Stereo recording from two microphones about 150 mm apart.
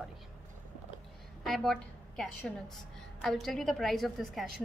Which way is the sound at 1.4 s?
Centre (ahead or behind).